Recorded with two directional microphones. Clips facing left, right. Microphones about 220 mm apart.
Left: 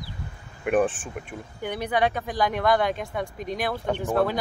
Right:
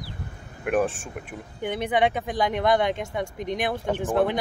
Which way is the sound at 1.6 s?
20° right (ahead or behind).